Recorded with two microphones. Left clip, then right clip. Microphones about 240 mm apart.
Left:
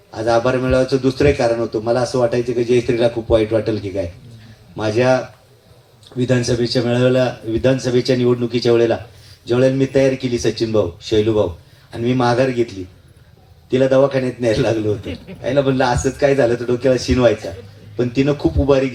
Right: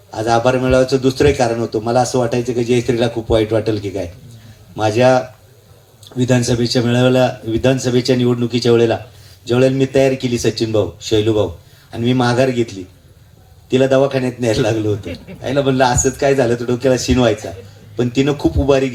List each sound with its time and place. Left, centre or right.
0.1 s a man's voice: right
15.0 s a man's voice: left
15.4 s a man's voice: right